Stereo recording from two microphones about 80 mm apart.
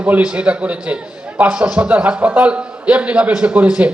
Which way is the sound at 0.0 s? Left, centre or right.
Centre.